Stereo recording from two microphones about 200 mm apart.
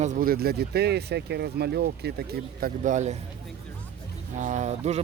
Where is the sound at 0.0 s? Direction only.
40° right (ahead or behind).